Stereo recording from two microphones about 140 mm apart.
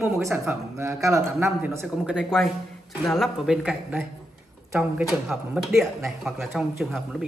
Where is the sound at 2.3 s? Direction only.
5° right (ahead or behind).